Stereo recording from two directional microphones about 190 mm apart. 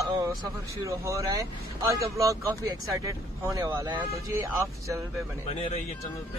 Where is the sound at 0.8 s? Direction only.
15° right (ahead or behind).